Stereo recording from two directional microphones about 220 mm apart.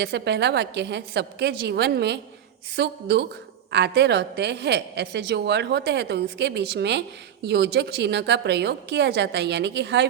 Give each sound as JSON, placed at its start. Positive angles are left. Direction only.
{"t": 0.0, "sound": "a woman's voice", "side_deg": -50}